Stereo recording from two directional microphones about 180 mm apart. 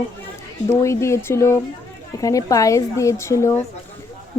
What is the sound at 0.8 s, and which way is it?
A woman's voice, 15° left (ahead or behind).